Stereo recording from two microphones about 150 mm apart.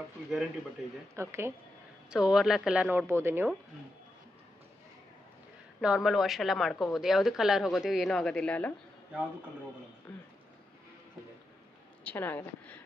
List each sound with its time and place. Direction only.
1.1 s speech: 15° right (ahead or behind)
2.0 s speech: 5° right (ahead or behind)
5.8 s a woman's voice: 5° right (ahead or behind)
12.0 s a sound: 10° left (ahead or behind)